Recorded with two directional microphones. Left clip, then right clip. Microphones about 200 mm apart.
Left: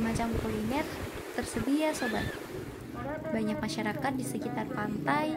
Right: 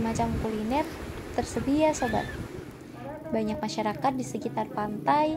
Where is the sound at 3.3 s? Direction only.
20° right (ahead or behind).